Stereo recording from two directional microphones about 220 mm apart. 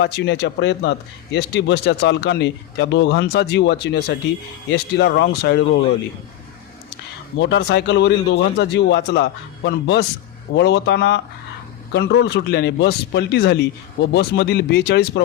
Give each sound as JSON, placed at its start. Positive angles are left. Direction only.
{"t": 0.0, "sound": "speech", "side_deg": 50}
{"t": 7.3, "sound": "speech", "side_deg": 55}